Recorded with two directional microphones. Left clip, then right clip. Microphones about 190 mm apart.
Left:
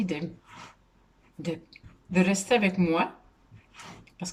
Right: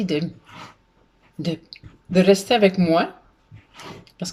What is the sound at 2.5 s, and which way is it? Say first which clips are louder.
Speech: right 7 dB; 15° left (ahead or behind).